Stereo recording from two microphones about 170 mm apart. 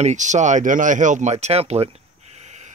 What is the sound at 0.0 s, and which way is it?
Speech, 45° right (ahead or behind).